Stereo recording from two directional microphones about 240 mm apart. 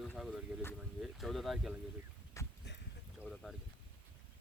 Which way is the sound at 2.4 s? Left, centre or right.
Centre.